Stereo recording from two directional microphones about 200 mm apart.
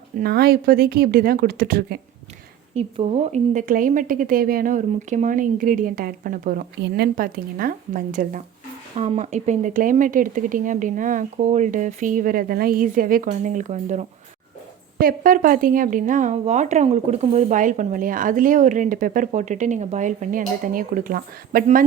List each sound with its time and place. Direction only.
0.2 s a woman's voice: 50° right (ahead or behind)
2.7 s a woman's voice: 30° right (ahead or behind)
9.0 s speech: 30° right (ahead or behind)